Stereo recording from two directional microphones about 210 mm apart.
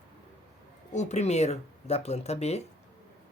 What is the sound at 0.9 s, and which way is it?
Speech, 35° left (ahead or behind).